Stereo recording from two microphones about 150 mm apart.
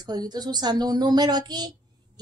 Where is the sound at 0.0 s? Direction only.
25° right (ahead or behind).